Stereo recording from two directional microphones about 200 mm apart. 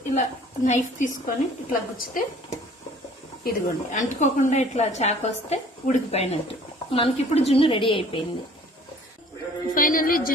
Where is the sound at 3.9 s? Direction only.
35° left (ahead or behind).